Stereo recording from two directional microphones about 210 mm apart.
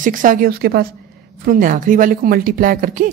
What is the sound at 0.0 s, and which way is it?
Speech, 40° right (ahead or behind).